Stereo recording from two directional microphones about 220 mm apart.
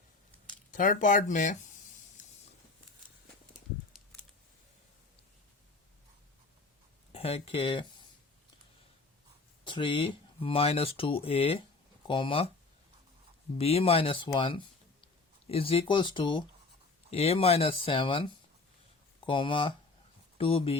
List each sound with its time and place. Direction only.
0.7 s speech: 35° left (ahead or behind)
2.2 s a sound: 35° left (ahead or behind)
7.1 s speech: 25° left (ahead or behind)
9.6 s speech: 20° left (ahead or behind)
13.6 s speech: 25° left (ahead or behind)